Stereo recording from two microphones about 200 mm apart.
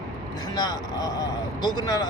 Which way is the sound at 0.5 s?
20° left (ahead or behind).